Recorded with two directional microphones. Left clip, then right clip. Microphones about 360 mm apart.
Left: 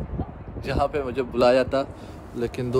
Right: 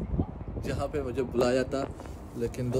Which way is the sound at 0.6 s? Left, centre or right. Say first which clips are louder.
Left 8 dB; centre.